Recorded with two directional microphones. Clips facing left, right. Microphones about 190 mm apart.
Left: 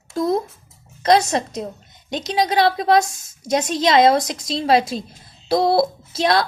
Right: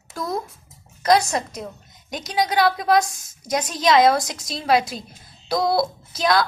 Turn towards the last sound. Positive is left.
turn(degrees=25)  # may be behind; listen again after turning